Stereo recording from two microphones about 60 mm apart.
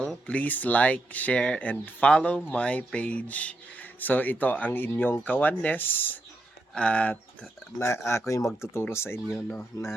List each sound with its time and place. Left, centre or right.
0.0 s speech: centre; by 6.1 s left
6.7 s speech: centre
7.8 s speech: left
9.7 s speech: left